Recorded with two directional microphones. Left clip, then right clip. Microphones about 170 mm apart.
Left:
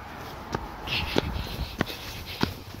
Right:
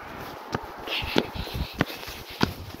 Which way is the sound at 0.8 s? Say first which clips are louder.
Left 1 dB; 10° left (ahead or behind).